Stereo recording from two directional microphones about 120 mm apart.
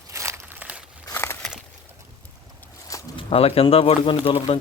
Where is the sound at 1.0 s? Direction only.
20° left (ahead or behind).